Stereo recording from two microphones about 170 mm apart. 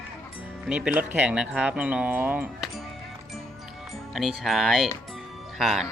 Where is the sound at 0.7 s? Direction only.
5° right (ahead or behind).